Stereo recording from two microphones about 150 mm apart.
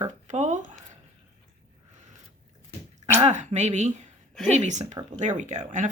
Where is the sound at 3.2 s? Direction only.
50° right (ahead or behind).